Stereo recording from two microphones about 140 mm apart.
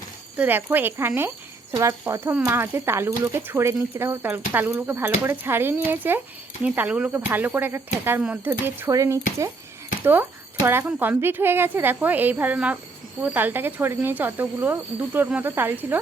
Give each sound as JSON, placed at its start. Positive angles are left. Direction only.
{"t": 0.3, "sound": "speech", "side_deg": -15}